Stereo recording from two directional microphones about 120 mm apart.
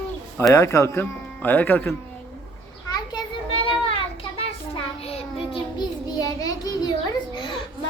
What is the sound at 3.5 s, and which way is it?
Child singing, 50° left (ahead or behind).